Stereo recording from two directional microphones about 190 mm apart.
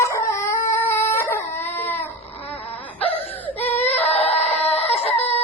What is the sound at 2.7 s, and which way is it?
Wail, 10° left (ahead or behind).